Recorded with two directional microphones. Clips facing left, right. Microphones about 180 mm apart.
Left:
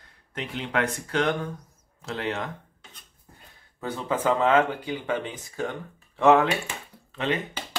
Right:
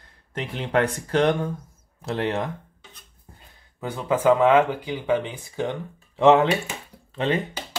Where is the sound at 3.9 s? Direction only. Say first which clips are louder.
Right 6 dB; 10° right (ahead or behind).